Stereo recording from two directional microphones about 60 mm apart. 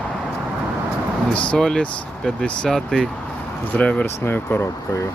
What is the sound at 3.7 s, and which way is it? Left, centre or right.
Speech, left.